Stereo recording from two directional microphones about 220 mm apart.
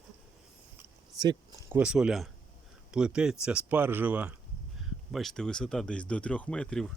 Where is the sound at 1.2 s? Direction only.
15° right (ahead or behind).